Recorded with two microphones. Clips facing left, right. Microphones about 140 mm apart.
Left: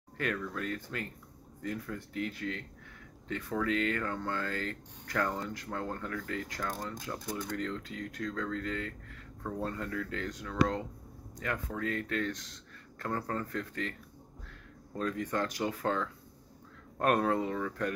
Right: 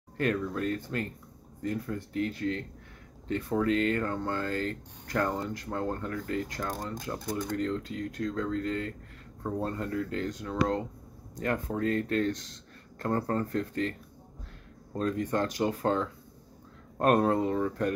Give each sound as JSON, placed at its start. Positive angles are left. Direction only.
{"t": 0.6, "sound": "speech", "side_deg": -30}
{"t": 11.3, "sound": "speech", "side_deg": -35}
{"t": 15.0, "sound": "speech", "side_deg": -25}